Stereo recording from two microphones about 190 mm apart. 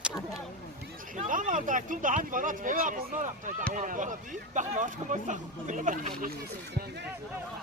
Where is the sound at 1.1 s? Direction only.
45° right (ahead or behind).